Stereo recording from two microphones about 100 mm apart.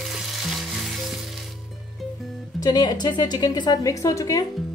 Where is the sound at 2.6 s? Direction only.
40° left (ahead or behind).